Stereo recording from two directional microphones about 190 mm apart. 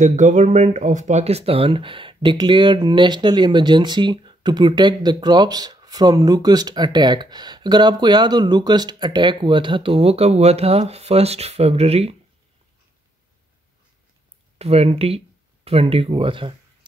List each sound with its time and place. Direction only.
0.0 s speech: 40° right (ahead or behind)
14.6 s speech: 30° right (ahead or behind)